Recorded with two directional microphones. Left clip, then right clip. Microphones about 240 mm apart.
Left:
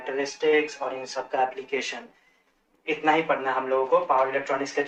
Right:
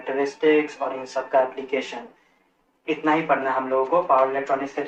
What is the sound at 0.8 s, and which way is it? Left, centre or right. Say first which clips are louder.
Speech: right 3 dB; left.